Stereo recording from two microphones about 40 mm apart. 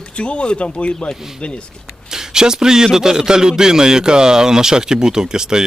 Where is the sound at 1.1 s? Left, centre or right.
Centre.